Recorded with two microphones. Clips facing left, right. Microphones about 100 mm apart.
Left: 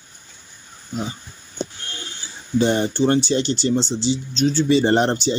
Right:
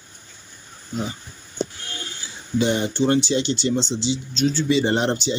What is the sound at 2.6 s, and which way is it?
Speech, 40° left (ahead or behind).